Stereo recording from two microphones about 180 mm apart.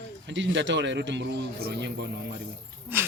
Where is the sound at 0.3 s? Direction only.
90° right; by 2.0 s 70° right (ahead or behind).